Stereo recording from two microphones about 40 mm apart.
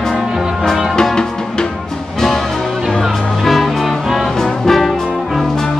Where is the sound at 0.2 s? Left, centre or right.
Centre.